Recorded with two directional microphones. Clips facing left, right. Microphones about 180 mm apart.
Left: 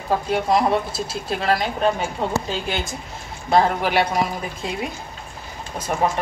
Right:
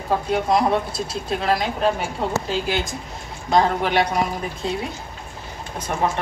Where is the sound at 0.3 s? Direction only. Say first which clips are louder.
Even; centre (ahead or behind).